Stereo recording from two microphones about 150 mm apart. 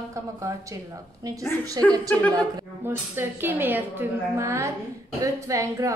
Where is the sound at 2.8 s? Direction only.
15° right (ahead or behind).